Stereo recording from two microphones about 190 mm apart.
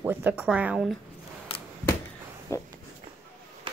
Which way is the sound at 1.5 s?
30° left (ahead or behind).